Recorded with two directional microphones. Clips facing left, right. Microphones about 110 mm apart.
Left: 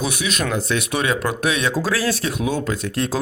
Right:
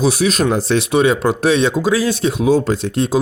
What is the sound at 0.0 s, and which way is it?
Speech, 35° right (ahead or behind).